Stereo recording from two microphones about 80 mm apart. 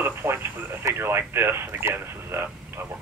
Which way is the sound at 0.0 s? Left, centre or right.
Right.